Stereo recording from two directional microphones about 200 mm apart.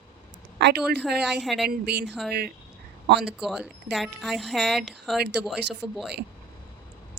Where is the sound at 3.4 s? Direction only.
5° right (ahead or behind).